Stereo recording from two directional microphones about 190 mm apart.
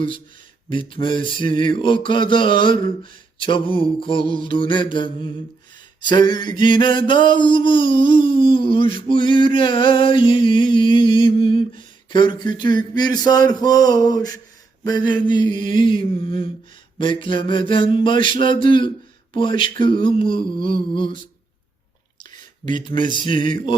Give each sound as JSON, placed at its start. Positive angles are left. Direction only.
{"t": 0.7, "sound": "mantra", "side_deg": 25}
{"t": 23.3, "sound": "speech", "side_deg": -45}